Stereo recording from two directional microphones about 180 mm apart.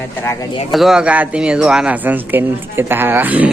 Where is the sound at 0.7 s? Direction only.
Centre (ahead or behind).